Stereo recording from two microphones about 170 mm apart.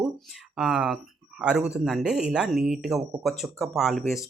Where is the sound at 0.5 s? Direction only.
5° right (ahead or behind).